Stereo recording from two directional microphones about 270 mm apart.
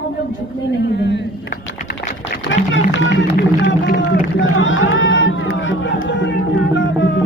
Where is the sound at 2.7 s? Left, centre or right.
Left.